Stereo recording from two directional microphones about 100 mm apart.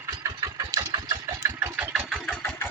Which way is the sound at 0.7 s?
40° right (ahead or behind).